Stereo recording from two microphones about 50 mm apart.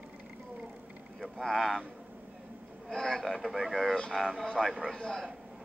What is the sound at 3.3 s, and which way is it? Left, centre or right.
Speech, centre.